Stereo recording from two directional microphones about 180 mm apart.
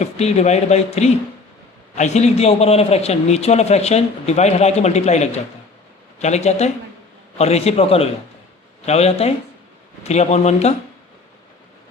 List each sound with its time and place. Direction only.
0.0 s a man's voice: 35° left (ahead or behind)